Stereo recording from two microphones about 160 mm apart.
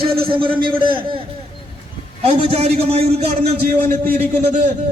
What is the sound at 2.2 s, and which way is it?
A man's voice, 40° right (ahead or behind).